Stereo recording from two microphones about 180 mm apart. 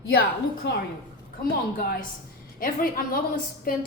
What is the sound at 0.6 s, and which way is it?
Speech, 75° left (ahead or behind).